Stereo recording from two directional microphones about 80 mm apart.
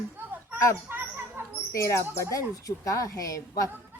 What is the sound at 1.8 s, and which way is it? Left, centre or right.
A woman's voice, left.